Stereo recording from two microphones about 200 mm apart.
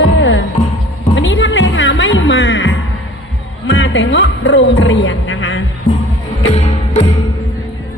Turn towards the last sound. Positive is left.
turn(degrees=30)  # may be behind; listen again after turning